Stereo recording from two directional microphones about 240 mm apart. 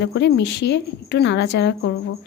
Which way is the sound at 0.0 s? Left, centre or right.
Left.